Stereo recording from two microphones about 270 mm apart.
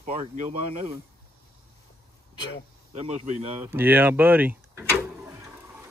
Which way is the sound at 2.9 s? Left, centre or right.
Right.